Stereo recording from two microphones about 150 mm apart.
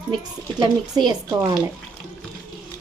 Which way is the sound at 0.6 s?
25° right (ahead or behind).